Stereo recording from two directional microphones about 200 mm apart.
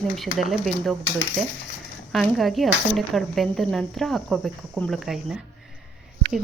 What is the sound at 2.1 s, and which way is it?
Speech, centre (ahead or behind).